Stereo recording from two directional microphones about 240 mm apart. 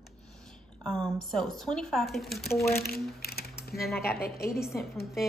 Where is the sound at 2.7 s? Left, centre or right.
Left.